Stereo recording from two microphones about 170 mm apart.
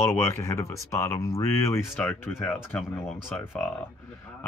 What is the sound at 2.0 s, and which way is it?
Speech, 5° left (ahead or behind).